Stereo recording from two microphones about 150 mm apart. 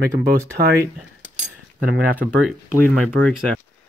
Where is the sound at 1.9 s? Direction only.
10° right (ahead or behind).